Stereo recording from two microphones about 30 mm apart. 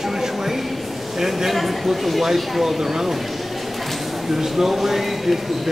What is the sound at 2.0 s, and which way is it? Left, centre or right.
Speech, centre.